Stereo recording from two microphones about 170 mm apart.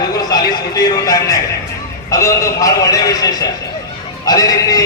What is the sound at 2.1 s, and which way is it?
A man's voice, 20° left (ahead or behind).